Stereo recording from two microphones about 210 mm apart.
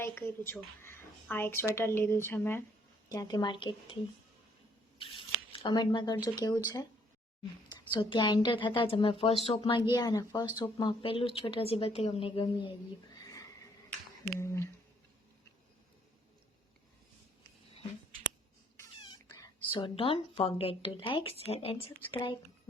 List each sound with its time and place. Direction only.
0.0 s a woman's voice: 10° left (ahead or behind)
4.9 s speech: 25° left (ahead or behind)
7.9 s a woman's voice: 20° left (ahead or behind)
14.3 s speech: 10° left (ahead or behind)
18.8 s a woman's voice: 20° left (ahead or behind)